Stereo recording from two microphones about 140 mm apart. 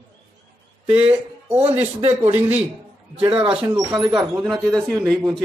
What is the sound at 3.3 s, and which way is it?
Speech, 40° right (ahead or behind).